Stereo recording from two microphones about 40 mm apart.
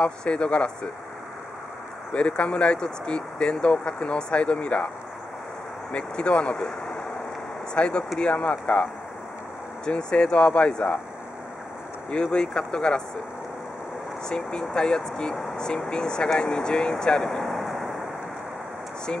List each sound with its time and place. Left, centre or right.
0.0 s speech: left
2.1 s speech: left
5.9 s speech: left
9.8 s speech: left
12.1 s speech: left
14.3 s speech: centre
17.0 s vehicle: centre